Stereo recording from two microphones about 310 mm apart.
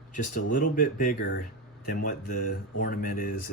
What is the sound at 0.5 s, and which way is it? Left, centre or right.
Speech, left.